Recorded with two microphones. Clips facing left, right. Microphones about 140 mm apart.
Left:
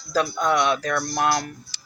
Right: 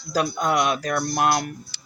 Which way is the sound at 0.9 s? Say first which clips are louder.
Right 1 dB; 25° right (ahead or behind).